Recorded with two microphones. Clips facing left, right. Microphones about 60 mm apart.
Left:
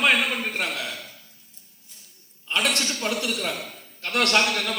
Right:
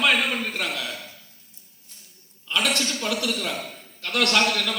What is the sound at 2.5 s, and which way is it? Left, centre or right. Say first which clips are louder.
A woman's voice: even; left.